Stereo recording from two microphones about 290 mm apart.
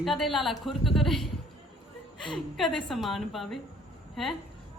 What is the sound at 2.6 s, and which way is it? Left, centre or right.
A woman's voice, centre.